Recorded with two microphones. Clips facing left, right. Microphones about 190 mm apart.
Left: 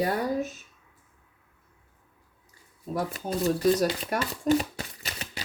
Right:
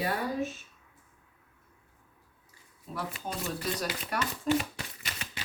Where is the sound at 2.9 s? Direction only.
40° left (ahead or behind).